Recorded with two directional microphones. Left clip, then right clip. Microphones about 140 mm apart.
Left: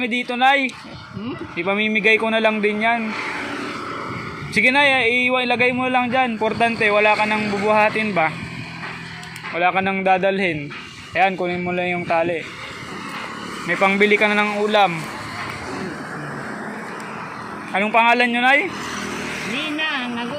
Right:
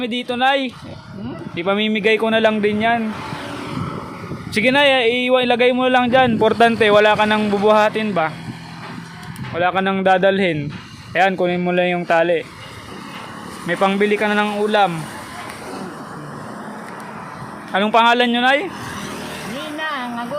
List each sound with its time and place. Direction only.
0.0 s speech: 30° right (ahead or behind)
1.5 s speech: 50° right (ahead or behind)
4.5 s speech: 50° right (ahead or behind)
5.7 s speech: 65° right (ahead or behind)
9.6 s speech: 45° right (ahead or behind); by 12.4 s 65° right (ahead or behind)
13.7 s speech: 45° right (ahead or behind)
14.0 s speech: 25° right (ahead or behind)
14.3 s speech: 40° right (ahead or behind)
17.8 s speech: 50° right (ahead or behind)
19.5 s a sound: 40° right (ahead or behind)